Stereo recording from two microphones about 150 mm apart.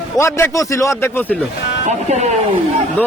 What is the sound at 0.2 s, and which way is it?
A man's voice, 20° left (ahead or behind).